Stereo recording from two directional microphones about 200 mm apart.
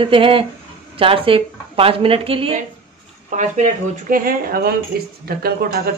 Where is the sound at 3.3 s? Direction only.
40° right (ahead or behind).